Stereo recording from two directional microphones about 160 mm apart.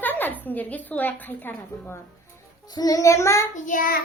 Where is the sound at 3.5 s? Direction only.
55° left (ahead or behind).